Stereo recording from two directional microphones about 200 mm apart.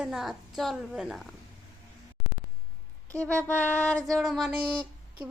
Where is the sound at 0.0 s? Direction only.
Centre (ahead or behind).